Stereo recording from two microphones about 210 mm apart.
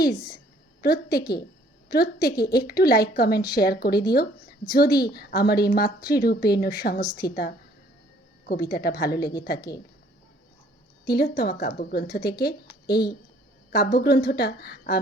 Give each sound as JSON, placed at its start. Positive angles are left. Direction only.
{"t": 0.8, "sound": "a woman's voice", "side_deg": 45}
{"t": 1.2, "sound": "speech", "side_deg": 20}
{"t": 2.4, "sound": "a woman's voice", "side_deg": 45}
{"t": 7.0, "sound": "a woman's voice", "side_deg": 20}
{"t": 8.4, "sound": "a woman's voice", "side_deg": 45}
{"t": 9.6, "sound": "speech", "side_deg": 20}
{"t": 11.0, "sound": "a woman's voice", "side_deg": 50}